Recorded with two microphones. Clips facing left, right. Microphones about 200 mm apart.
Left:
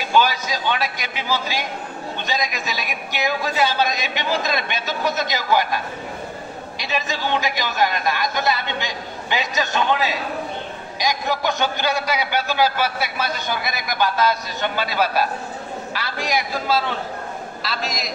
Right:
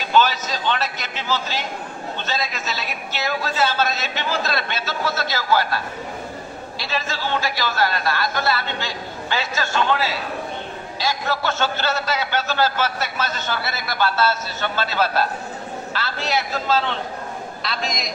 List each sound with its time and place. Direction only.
0.0 s a man's voice: 10° left (ahead or behind)
6.8 s a man's voice: 15° left (ahead or behind)